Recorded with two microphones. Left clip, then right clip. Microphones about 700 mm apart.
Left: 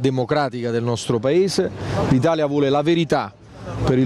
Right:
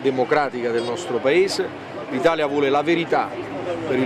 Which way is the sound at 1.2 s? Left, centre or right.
Left.